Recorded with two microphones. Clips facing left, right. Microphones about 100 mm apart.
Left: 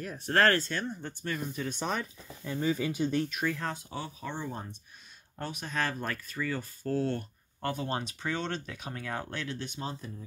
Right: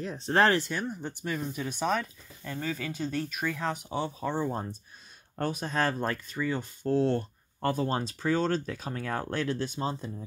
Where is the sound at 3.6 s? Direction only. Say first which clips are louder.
Right 5 dB; 15° right (ahead or behind).